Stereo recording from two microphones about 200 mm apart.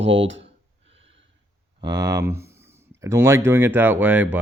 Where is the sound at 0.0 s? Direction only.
70° right (ahead or behind).